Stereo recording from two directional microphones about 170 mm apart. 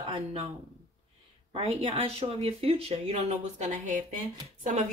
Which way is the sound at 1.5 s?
35° right (ahead or behind).